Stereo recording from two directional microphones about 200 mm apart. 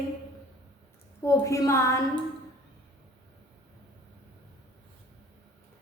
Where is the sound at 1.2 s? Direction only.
15° left (ahead or behind).